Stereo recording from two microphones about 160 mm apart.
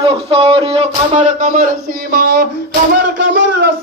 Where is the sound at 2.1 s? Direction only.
85° right.